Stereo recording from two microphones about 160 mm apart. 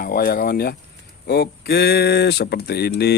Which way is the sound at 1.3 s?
85° left.